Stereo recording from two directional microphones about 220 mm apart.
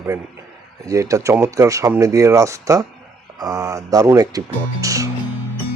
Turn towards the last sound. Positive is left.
turn(degrees=-15)  # may be behind; listen again after turning